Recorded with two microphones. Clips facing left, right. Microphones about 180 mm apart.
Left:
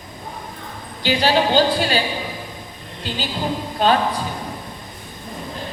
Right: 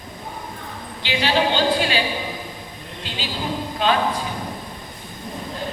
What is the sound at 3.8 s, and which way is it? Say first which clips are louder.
Speech: left 3 dB; 40° left (ahead or behind).